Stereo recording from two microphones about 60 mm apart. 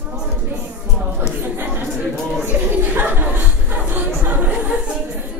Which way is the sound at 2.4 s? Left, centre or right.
Right.